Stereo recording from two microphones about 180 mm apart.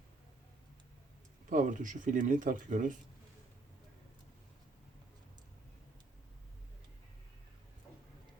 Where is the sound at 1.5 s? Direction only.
45° right (ahead or behind).